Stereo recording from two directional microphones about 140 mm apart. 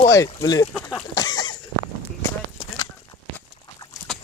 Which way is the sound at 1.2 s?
30° left (ahead or behind).